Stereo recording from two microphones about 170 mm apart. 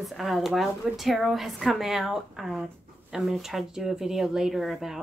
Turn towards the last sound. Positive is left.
turn(degrees=0)  # may be behind; listen again after turning